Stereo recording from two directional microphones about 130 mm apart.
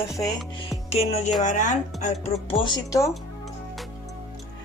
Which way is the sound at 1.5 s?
70° left (ahead or behind).